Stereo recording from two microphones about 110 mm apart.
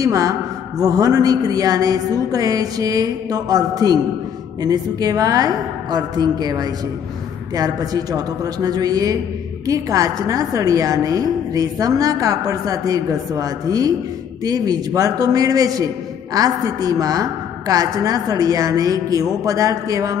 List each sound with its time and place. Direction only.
0.0 s a woman's voice: 30° right (ahead or behind)